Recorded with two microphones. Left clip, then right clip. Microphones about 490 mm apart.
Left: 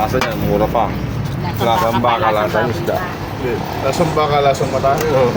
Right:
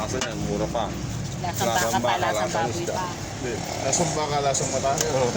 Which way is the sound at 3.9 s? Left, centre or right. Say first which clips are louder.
Left 10 dB; right.